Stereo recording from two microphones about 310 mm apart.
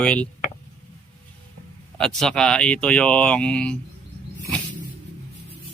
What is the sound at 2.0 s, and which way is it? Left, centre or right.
Speech, centre.